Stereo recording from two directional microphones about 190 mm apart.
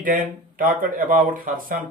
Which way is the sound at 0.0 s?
45° right (ahead or behind).